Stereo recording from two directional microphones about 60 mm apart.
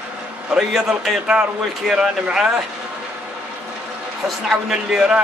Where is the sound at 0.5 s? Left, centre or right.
Centre.